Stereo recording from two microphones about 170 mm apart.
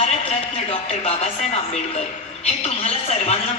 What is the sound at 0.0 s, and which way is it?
A man's voice, 40° left (ahead or behind).